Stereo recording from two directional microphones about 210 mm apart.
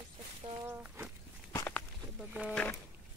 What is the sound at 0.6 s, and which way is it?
Speech, 10° right (ahead or behind).